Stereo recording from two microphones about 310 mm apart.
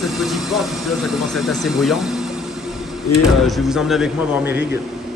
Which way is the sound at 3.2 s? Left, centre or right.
Centre.